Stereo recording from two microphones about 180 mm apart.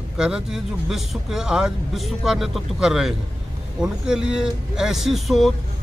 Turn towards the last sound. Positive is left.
turn(degrees=0)  # may be behind; listen again after turning